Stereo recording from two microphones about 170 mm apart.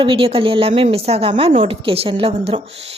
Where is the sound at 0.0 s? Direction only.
30° right (ahead or behind).